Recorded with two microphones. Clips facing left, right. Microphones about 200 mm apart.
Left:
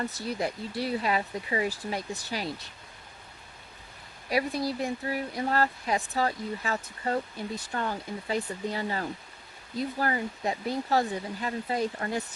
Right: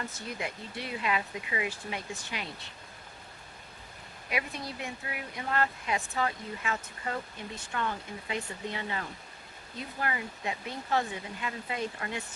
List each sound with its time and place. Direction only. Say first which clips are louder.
0.0 s speech: left 6 dB; 35° left (ahead or behind)
4.3 s speech: left 8 dB; 35° left (ahead or behind)